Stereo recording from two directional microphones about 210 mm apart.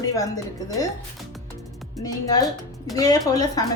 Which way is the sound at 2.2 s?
15° left (ahead or behind).